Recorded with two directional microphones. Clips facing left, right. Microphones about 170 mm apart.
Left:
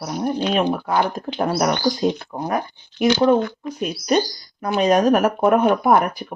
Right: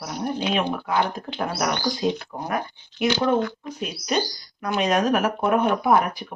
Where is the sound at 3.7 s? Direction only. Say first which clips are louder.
Left 6 dB; 45° left (ahead or behind).